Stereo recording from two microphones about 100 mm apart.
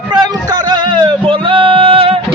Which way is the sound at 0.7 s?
45° right (ahead or behind).